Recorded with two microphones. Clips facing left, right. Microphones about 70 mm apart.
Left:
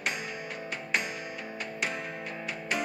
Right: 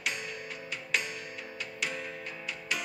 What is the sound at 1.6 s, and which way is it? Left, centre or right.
Music, left.